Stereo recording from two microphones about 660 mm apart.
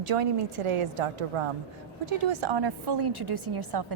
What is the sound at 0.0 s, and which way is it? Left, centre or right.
A woman's voice, right.